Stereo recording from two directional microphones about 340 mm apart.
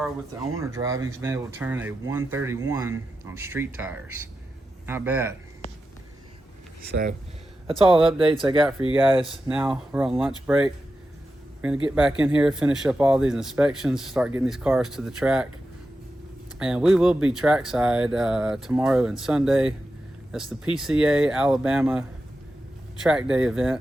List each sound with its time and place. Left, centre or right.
0.7 s speech: centre
6.9 s speech: right
9.5 s speech: centre
11.9 s speech: centre
16.6 s speech: centre
23.0 s speech: centre